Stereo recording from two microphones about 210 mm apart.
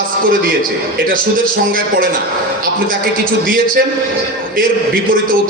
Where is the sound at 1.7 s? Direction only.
45° right (ahead or behind).